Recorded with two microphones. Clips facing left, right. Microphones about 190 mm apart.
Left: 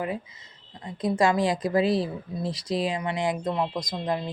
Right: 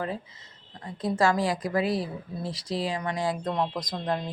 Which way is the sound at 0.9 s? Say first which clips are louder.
Left 2 dB; 15° left (ahead or behind).